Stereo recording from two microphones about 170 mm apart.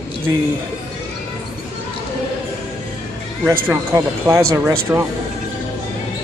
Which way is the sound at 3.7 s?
15° right (ahead or behind).